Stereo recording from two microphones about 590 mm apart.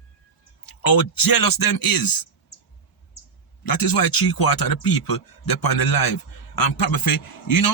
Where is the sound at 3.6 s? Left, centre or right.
Left.